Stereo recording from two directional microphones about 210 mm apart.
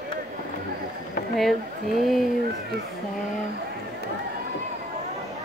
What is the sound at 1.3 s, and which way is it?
Speech, centre (ahead or behind).